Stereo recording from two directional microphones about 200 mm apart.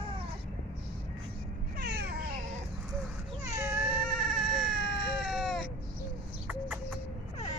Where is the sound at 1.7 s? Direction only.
55° right (ahead or behind).